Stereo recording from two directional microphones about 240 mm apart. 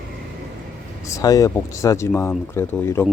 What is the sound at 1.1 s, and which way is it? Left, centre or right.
Speech, centre.